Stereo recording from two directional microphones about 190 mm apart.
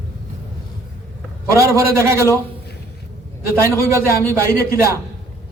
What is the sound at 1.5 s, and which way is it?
Speech, 15° right (ahead or behind).